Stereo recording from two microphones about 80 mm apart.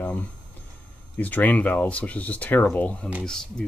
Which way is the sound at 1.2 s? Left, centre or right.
Left.